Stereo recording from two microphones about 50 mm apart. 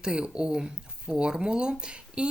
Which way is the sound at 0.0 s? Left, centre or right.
Centre.